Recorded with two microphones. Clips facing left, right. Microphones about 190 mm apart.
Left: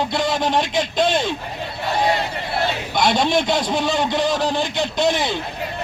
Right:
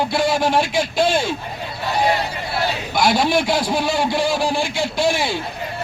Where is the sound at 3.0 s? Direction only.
5° right (ahead or behind).